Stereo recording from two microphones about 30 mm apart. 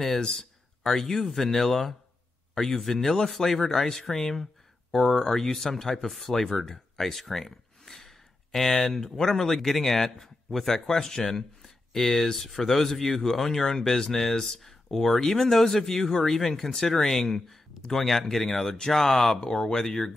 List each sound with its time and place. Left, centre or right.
0.3 s speech: centre
18.7 s speech: left